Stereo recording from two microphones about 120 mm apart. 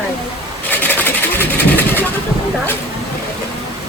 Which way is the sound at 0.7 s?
15° left (ahead or behind).